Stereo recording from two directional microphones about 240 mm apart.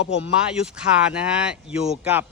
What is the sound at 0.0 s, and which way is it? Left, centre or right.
Speech, left.